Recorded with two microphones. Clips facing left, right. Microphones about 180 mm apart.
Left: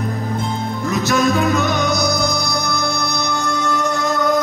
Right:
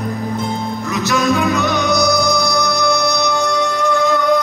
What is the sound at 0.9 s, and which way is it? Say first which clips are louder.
Music: even; 55° left (ahead or behind).